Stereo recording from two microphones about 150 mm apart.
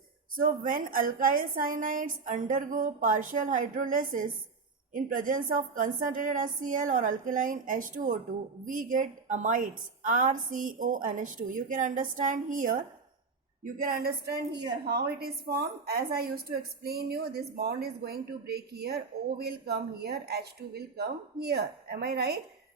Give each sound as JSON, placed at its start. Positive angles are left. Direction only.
{"t": 0.3, "sound": "a woman's voice", "side_deg": -70}
{"t": 14.8, "sound": "a woman's voice", "side_deg": -90}